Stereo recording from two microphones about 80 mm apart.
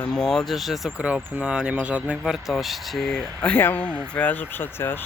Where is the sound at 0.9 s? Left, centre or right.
Centre.